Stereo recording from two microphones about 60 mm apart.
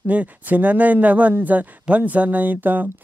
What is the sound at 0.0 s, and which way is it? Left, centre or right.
Speech, right.